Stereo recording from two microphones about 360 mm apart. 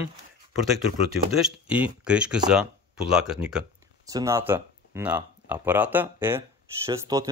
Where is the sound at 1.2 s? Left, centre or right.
Centre.